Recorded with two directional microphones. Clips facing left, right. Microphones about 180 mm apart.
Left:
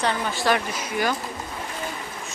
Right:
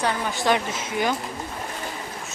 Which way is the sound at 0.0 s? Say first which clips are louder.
Even; 20° right (ahead or behind).